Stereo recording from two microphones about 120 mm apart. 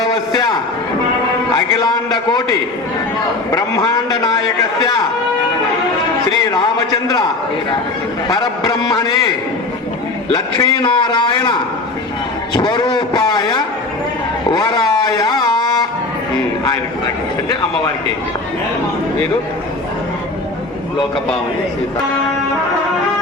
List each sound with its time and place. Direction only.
0.0 s a man's voice: 35° left (ahead or behind)
1.5 s a man's voice: 35° left (ahead or behind)
6.5 s a man's voice: 35° left (ahead or behind)
8.3 s a man's voice: 35° left (ahead or behind)
10.3 s a man's voice: 35° left (ahead or behind)
12.5 s a man's voice: 35° left (ahead or behind)